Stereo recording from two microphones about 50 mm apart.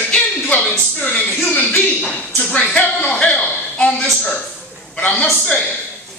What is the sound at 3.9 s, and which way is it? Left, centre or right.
Speech, centre.